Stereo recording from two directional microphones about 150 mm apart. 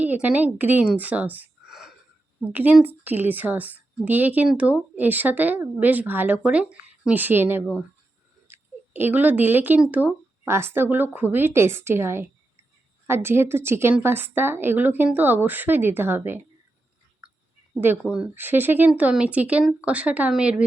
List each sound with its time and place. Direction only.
0.0 s a woman's voice: 10° right (ahead or behind)
17.2 s a sound: 5° right (ahead or behind)
18.0 s a woman's voice: 5° right (ahead or behind)